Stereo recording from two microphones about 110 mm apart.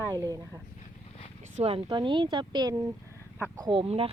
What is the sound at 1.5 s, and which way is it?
Speech, 70° right (ahead or behind).